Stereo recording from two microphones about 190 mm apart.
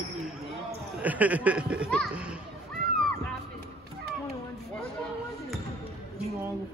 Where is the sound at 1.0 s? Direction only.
10° right (ahead or behind).